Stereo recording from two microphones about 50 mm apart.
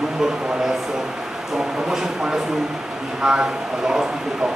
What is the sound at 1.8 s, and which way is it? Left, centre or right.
A man's voice, centre.